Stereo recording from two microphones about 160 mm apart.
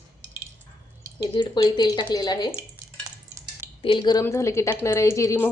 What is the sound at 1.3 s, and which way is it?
Speech, 30° left (ahead or behind).